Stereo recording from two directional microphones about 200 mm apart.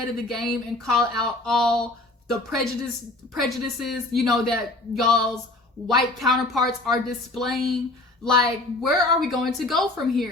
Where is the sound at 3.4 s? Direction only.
Centre (ahead or behind).